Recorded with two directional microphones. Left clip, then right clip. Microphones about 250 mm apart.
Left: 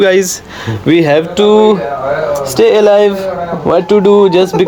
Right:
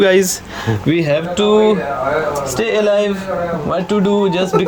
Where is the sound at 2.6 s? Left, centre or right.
Centre.